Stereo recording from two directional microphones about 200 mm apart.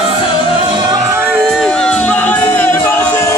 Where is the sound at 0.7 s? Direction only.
15° right (ahead or behind).